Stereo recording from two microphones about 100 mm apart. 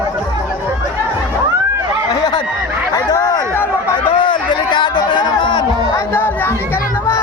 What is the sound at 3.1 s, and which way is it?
Chatter, 40° left (ahead or behind).